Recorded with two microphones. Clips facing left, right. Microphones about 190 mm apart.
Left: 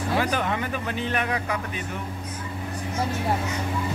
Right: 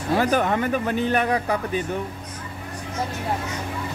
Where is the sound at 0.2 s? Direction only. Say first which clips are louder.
Right 5 dB; 45° right (ahead or behind).